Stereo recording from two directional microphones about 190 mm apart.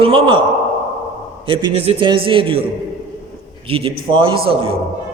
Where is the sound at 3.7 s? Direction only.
30° right (ahead or behind).